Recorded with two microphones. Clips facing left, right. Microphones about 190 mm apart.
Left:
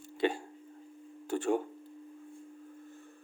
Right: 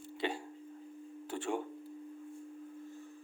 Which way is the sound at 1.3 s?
45° left (ahead or behind).